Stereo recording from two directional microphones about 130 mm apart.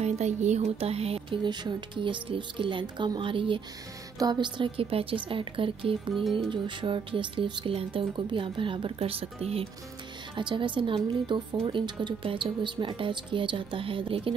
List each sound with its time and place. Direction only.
0.0 s a woman's voice: 60° right (ahead or behind)
10.3 s a woman's voice: 40° right (ahead or behind)